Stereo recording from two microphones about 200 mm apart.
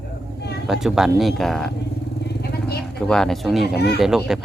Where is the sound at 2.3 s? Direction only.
55° left (ahead or behind).